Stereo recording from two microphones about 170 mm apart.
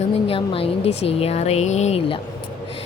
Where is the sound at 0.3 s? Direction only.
35° left (ahead or behind).